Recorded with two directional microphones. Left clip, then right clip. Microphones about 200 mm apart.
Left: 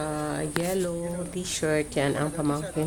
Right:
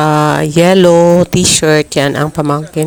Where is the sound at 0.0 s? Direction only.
55° right (ahead or behind).